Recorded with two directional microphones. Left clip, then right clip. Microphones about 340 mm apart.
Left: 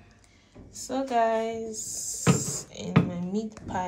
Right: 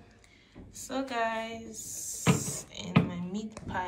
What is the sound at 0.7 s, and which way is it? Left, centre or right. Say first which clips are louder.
Speech: left 6 dB; centre.